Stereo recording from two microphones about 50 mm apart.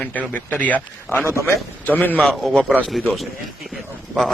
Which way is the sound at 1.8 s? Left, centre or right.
Left.